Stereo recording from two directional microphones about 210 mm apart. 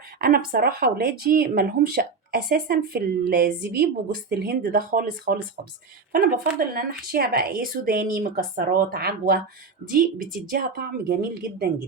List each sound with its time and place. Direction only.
0.2 s speech: 45° right (ahead or behind)
10.5 s speech: 45° right (ahead or behind)